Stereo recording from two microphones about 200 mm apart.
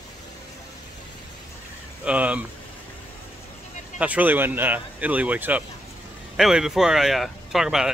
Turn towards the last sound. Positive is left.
turn(degrees=-5)  # may be behind; listen again after turning